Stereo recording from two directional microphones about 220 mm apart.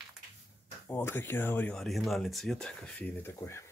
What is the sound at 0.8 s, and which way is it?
Speech, 10° left (ahead or behind).